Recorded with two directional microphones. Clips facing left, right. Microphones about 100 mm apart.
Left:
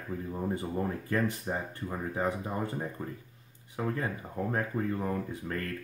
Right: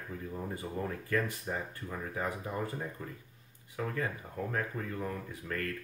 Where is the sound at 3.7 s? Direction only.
30° left (ahead or behind).